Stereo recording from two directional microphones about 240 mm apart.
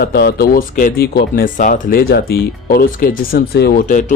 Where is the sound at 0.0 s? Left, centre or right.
Left.